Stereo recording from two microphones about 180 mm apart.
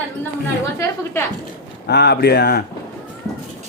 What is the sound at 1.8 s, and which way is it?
Speech, 65° left (ahead or behind).